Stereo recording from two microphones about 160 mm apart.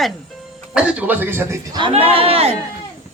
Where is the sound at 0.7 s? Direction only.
10° right (ahead or behind).